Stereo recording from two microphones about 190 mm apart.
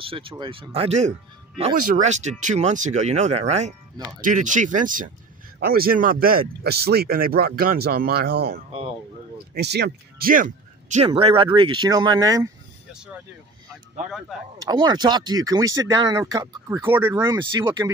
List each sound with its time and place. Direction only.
0.0 s speech: 30° right (ahead or behind)
11.1 s speech: 30° right (ahead or behind)
14.6 s speech: 20° right (ahead or behind)